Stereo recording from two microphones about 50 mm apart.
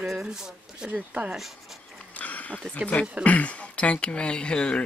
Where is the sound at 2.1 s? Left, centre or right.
Left.